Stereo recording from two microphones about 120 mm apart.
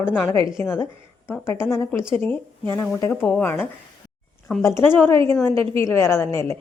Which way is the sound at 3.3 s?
15° left (ahead or behind).